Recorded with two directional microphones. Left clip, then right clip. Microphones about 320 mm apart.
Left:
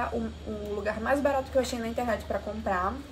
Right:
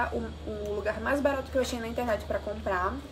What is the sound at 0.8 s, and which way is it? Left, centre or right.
A woman's voice, centre.